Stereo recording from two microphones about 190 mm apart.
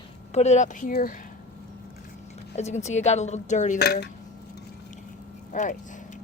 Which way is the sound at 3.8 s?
55° left (ahead or behind).